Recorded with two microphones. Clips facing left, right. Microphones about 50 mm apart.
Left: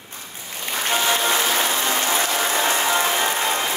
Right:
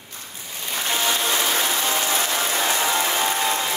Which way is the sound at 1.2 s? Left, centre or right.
Left.